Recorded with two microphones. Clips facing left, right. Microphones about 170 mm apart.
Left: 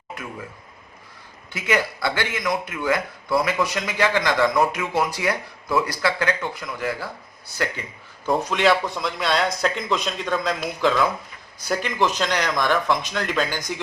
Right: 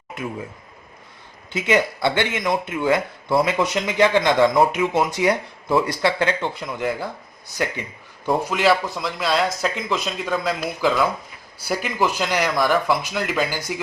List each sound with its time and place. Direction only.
1.5 s speech: 25° right (ahead or behind)
8.3 s speech: 5° right (ahead or behind)